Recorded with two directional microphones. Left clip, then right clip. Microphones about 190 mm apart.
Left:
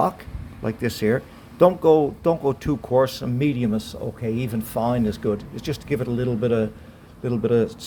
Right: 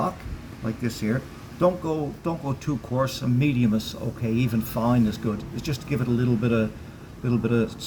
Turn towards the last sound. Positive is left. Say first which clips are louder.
# left 4 dB
turn(degrees=35)  # may be behind; listen again after turning